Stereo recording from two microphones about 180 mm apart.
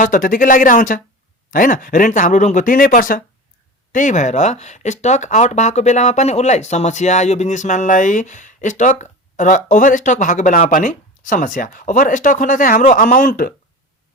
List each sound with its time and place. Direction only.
0.0 s speech: 50° left (ahead or behind)